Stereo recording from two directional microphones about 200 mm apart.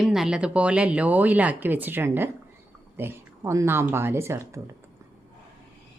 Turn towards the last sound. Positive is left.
turn(degrees=-15)  # may be behind; listen again after turning